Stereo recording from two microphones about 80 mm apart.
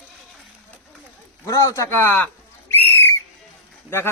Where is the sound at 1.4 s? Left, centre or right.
Left.